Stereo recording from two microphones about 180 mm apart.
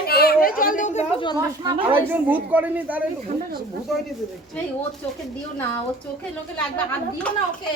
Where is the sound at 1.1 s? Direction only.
25° left (ahead or behind).